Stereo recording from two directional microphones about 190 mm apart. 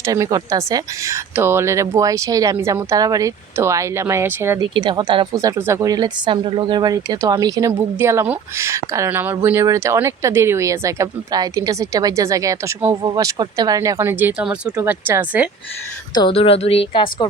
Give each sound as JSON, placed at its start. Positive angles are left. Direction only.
{"t": 0.0, "sound": "speech", "side_deg": -15}
{"t": 4.7, "sound": "speech", "side_deg": -25}
{"t": 16.1, "sound": "a woman's voice", "side_deg": 25}